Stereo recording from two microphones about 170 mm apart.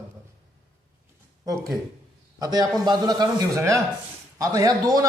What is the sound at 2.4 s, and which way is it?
A man's voice, 20° right (ahead or behind).